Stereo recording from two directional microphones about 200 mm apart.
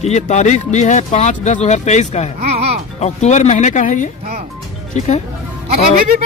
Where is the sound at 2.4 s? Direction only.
30° right (ahead or behind).